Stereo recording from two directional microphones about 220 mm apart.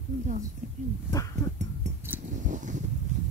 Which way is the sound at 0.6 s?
35° right (ahead or behind).